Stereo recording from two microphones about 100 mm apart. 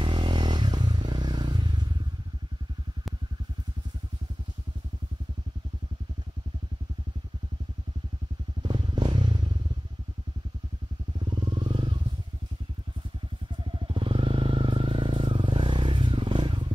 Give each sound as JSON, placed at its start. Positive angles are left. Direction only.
{"t": 0.0, "sound": "a sound", "side_deg": -55}
{"t": 8.6, "sound": "motorcycle", "side_deg": -50}
{"t": 11.1, "sound": "motorcycle", "side_deg": -50}
{"t": 13.7, "sound": "vehicle", "side_deg": -60}